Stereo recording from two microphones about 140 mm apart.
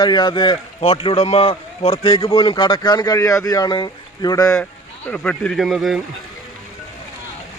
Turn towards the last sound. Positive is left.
turn(degrees=0)  # may be behind; listen again after turning